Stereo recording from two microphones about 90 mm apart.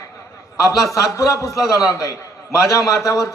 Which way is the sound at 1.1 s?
35° left (ahead or behind).